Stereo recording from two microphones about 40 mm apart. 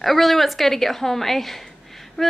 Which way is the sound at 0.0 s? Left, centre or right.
Centre.